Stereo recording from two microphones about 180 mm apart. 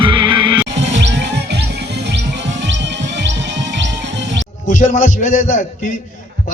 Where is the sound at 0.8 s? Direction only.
80° right.